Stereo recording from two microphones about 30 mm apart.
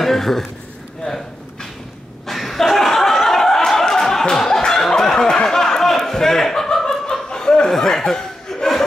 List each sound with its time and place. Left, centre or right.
0.0 s a man's voice: centre
1.0 s a sound: centre
2.2 s laughter: centre
5.0 s a sound: left
7.2 s laughter: left
7.7 s chuckle: centre